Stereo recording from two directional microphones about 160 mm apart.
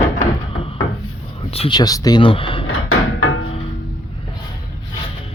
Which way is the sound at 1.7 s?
25° left (ahead or behind).